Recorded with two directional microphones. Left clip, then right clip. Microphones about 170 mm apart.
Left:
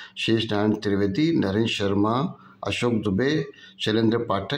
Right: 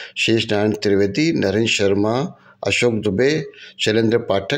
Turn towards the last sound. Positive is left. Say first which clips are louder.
# right 6 dB
turn(degrees=-35)  # may be behind; listen again after turning